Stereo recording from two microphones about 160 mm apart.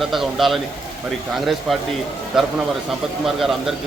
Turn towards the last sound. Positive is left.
turn(degrees=0)  # may be behind; listen again after turning